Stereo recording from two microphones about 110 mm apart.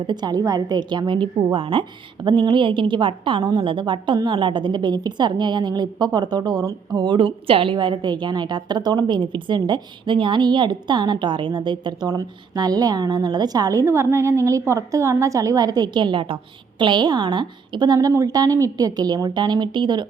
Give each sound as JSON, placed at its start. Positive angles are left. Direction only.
{"t": 0.1, "sound": "a woman's voice", "side_deg": -40}